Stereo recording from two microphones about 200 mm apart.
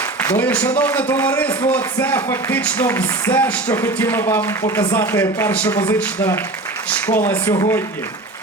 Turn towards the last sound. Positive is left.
turn(degrees=35)  # may be behind; listen again after turning